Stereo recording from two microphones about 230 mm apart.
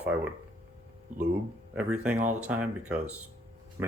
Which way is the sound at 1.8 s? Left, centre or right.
Centre.